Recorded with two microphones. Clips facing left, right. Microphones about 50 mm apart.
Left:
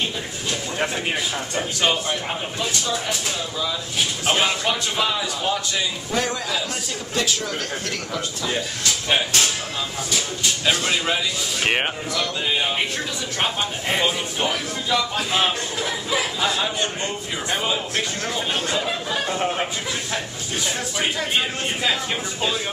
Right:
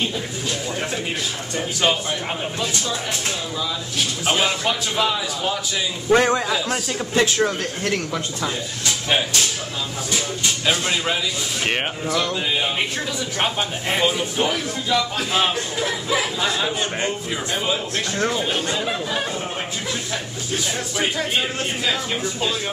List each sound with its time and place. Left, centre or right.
1.8 s speech: centre
4.3 s speech: centre
6.0 s a man's voice: right
10.6 s speech: centre
11.6 s speech: centre
13.4 s speech: centre
18.5 s speech: centre